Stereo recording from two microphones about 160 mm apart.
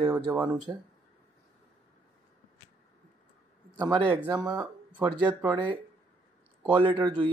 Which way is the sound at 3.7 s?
25° right (ahead or behind).